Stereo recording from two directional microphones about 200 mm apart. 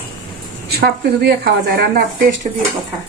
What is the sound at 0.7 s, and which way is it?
A woman's voice, 50° right (ahead or behind).